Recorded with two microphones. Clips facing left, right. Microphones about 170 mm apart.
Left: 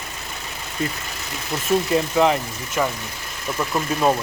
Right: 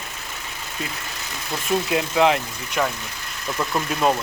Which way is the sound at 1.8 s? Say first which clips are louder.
Right 1 dB; 5° right (ahead or behind).